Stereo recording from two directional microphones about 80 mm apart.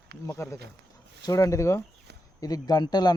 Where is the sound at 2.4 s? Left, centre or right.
Left.